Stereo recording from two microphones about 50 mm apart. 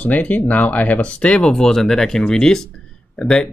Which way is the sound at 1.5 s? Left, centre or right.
Centre.